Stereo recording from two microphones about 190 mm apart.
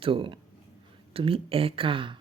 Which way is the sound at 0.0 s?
25° right (ahead or behind).